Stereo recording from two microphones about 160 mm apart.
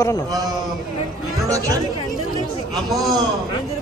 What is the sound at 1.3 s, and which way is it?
Chatter, 20° right (ahead or behind).